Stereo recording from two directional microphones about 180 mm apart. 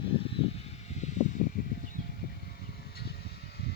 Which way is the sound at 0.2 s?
35° left (ahead or behind).